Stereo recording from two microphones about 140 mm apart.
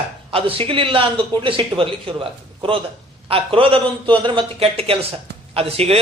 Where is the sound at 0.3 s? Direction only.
40° right (ahead or behind).